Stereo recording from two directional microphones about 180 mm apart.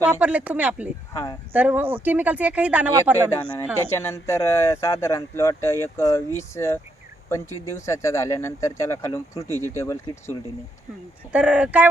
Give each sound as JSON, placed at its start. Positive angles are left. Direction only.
{"t": 0.1, "sound": "speech", "side_deg": -5}
{"t": 1.1, "sound": "speech", "side_deg": 20}
{"t": 1.5, "sound": "speech", "side_deg": -10}
{"t": 3.9, "sound": "speech", "side_deg": 15}
{"t": 11.3, "sound": "speech", "side_deg": -5}